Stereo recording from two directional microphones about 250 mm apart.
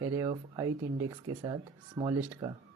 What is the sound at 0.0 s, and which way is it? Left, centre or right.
Speech, centre.